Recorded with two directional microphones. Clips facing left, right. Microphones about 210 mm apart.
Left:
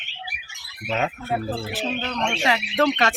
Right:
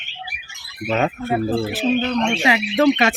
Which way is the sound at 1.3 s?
5° right (ahead or behind).